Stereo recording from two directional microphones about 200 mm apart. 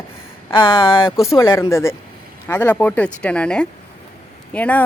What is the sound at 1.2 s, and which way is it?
Speech, 15° left (ahead or behind).